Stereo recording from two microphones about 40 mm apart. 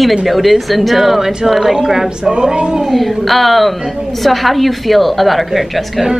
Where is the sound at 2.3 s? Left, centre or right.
Right.